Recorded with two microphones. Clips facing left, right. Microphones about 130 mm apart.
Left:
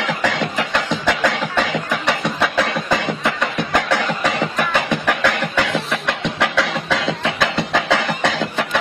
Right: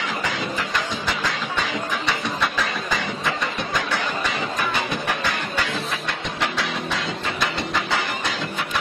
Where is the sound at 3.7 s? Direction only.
75° left (ahead or behind).